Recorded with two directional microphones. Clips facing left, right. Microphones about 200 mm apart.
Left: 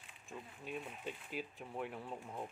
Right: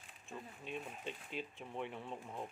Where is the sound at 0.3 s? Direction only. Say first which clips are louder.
Even; 5° left (ahead or behind).